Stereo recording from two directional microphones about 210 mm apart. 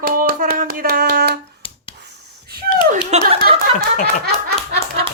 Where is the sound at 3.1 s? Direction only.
30° right (ahead or behind).